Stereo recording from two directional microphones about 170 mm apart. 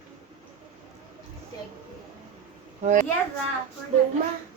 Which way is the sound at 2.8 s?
45° right (ahead or behind).